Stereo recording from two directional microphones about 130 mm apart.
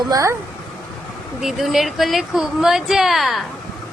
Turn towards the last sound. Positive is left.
turn(degrees=0)  # may be behind; listen again after turning